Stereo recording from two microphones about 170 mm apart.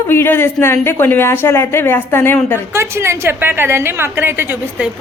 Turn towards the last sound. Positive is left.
turn(degrees=-10)  # may be behind; listen again after turning